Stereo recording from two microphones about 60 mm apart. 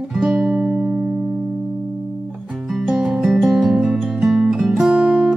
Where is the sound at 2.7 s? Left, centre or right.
Centre.